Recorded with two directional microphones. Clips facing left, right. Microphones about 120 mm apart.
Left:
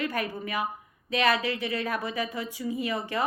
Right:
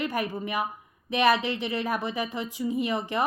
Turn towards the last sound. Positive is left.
turn(degrees=-20)  # may be behind; listen again after turning